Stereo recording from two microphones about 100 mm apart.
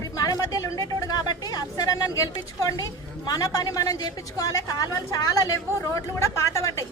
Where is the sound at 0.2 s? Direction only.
40° left (ahead or behind).